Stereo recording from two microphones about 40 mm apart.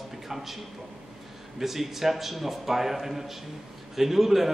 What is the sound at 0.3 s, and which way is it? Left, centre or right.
Speech, centre.